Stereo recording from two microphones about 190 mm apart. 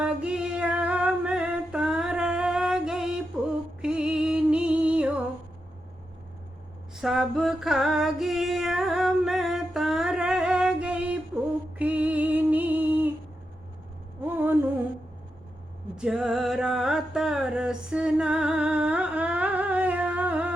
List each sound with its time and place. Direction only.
0.0 s female singing: 5° right (ahead or behind)
3.8 s music: 5° right (ahead or behind)
6.9 s female singing: centre (ahead or behind)
11.8 s music: 10° right (ahead or behind)
16.0 s music: 5° right (ahead or behind)